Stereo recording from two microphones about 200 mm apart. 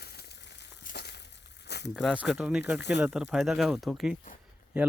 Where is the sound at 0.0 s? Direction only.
50° left (ahead or behind).